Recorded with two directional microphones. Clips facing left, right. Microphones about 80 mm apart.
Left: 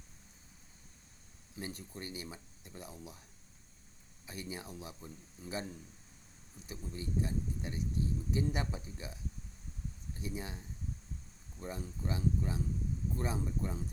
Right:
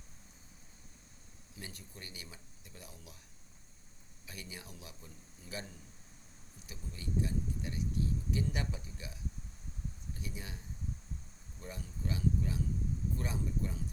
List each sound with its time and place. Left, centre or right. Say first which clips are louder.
1.5 s speech: left 6 dB; left
4.3 s speech: left 5 dB; left
6.7 s speech: left 2 dB; left
10.2 s speech: left 6 dB; left
11.6 s speech: left 3 dB; left